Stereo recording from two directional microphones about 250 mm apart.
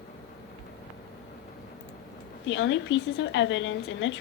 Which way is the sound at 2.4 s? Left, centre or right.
Left.